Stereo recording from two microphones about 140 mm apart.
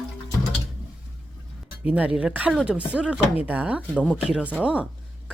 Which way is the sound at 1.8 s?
10° right (ahead or behind).